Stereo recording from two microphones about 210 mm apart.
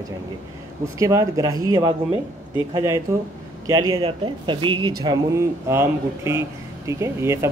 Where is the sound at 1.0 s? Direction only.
15° right (ahead or behind).